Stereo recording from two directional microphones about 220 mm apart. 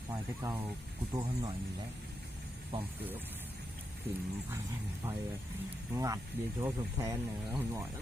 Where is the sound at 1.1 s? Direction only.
20° right (ahead or behind).